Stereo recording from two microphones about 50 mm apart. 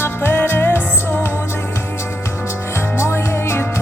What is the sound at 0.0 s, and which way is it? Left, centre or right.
Music, left.